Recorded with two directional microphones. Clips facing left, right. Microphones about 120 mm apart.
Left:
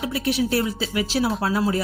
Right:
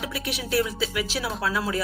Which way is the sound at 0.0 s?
35° left (ahead or behind).